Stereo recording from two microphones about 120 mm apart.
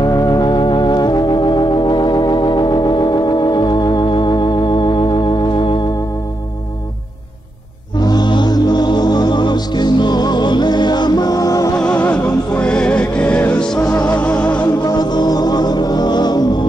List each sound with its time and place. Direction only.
0.0 s organ: 35° left (ahead or behind)
8.0 s music: 35° left (ahead or behind)
11.7 s music: 10° left (ahead or behind)
14.8 s music: 35° left (ahead or behind)